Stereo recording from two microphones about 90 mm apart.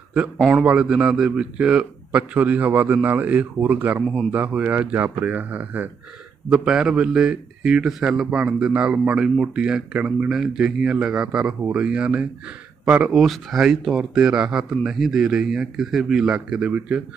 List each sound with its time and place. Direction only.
0.5 s a man's voice: 10° right (ahead or behind)
13.1 s a man's voice: centre (ahead or behind)